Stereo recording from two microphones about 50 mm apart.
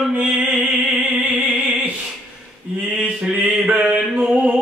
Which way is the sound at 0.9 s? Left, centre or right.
Right.